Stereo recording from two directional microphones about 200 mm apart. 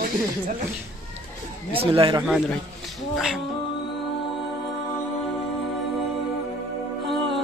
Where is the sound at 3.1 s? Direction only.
Centre (ahead or behind).